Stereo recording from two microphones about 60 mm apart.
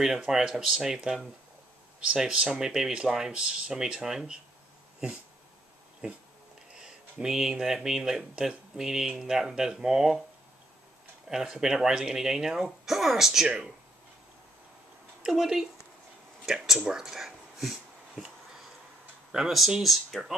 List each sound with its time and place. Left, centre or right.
0.0 s speech: centre
6.0 s speech: centre
11.2 s speech: centre
15.2 s speech: centre
19.3 s speech: centre